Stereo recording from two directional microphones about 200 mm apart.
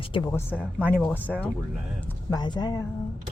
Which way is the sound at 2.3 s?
20° left (ahead or behind).